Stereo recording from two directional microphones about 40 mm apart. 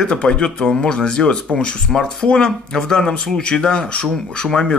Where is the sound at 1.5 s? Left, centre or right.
Left.